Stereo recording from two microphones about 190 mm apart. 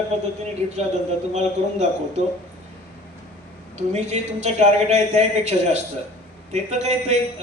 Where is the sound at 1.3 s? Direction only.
35° right (ahead or behind).